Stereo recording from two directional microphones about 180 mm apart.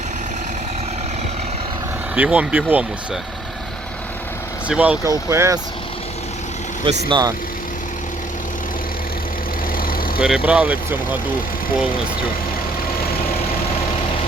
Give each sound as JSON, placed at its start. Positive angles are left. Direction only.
{"t": 2.1, "sound": "speech", "side_deg": -10}
{"t": 4.7, "sound": "speech", "side_deg": -5}
{"t": 6.8, "sound": "speech", "side_deg": -25}
{"t": 10.2, "sound": "speech", "side_deg": -5}